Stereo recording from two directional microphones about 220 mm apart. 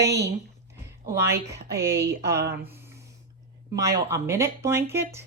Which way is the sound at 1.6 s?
45° right (ahead or behind).